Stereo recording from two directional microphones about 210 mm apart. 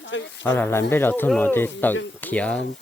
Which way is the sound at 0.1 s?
60° left (ahead or behind).